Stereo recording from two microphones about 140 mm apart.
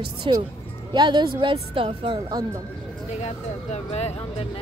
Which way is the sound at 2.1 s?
25° right (ahead or behind).